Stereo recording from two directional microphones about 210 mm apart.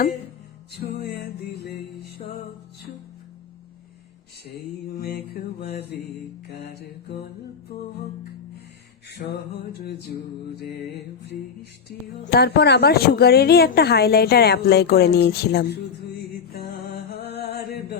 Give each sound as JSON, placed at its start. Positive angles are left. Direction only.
{"t": 0.8, "sound": "mantra", "side_deg": 50}
{"t": 4.4, "sound": "mantra", "side_deg": 45}
{"t": 9.3, "sound": "mantra", "side_deg": 50}
{"t": 12.2, "sound": "a woman's voice", "side_deg": 50}